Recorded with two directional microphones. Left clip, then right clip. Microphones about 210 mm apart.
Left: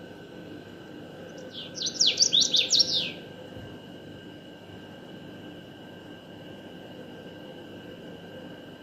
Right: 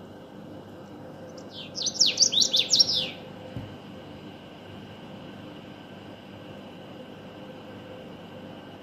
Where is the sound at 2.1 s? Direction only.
55° right (ahead or behind).